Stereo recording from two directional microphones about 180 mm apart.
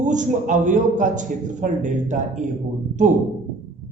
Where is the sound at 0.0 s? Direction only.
45° right (ahead or behind).